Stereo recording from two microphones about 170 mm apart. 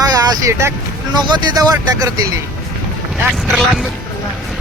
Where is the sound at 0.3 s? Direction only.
15° right (ahead or behind).